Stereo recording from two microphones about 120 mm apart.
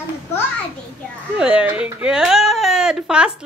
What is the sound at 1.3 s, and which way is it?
Speech, 10° right (ahead or behind).